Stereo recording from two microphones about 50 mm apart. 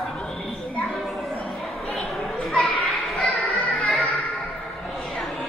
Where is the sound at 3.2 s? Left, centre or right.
Centre.